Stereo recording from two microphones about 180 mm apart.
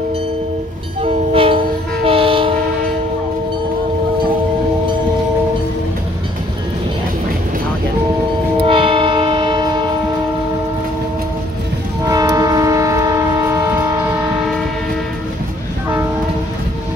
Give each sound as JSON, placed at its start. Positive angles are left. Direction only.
{"t": 1.0, "sound": "train", "side_deg": -30}
{"t": 8.5, "sound": "train", "side_deg": -30}
{"t": 12.1, "sound": "train", "side_deg": -20}